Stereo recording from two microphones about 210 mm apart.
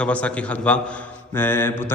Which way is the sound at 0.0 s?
5° left (ahead or behind).